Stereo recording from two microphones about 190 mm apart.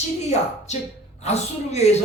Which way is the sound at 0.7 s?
35° left (ahead or behind).